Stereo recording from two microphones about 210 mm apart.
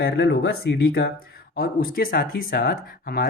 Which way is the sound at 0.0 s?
50° left (ahead or behind).